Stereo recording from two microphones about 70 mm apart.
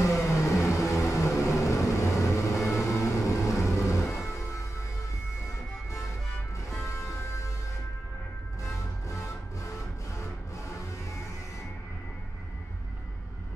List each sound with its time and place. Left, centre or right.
0.0 s vehicle: left
6.8 s music: left
9.1 s music: left